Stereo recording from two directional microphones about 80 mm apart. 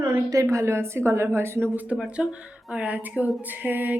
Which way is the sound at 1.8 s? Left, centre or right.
Centre.